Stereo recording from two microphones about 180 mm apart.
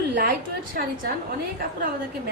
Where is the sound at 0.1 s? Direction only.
55° right (ahead or behind).